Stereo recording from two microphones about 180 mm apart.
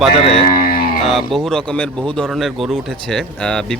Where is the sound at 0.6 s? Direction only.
55° left (ahead or behind).